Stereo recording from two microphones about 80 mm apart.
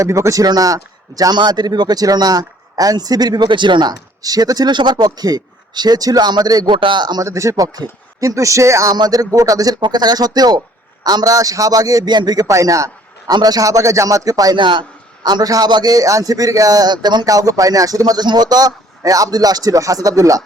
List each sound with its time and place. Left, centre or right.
0.0 s speech: right
0.4 s a man's voice: right
1.4 s speech: right
4.2 s speech: right
6.7 s speech: right
7.3 s a man's voice: right
9.8 s a man's voice: right
12.5 s a man's voice: right
14.5 s a man's voice: right
15.2 s a man's voice: right
17.2 s a man's voice: right